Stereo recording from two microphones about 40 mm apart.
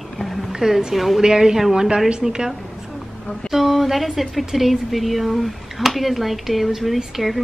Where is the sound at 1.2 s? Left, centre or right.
Centre.